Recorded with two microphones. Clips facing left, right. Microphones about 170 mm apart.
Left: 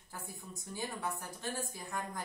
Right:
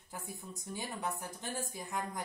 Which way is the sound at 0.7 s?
20° right (ahead or behind).